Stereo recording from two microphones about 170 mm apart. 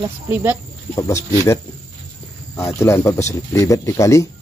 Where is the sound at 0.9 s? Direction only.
20° left (ahead or behind).